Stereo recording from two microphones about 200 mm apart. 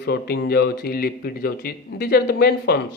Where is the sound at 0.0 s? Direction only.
55° left (ahead or behind).